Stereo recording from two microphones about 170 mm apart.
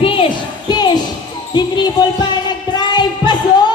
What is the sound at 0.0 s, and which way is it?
Music, 30° left (ahead or behind).